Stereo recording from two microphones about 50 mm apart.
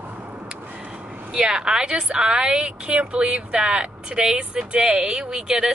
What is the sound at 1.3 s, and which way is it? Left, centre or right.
A woman's voice, centre.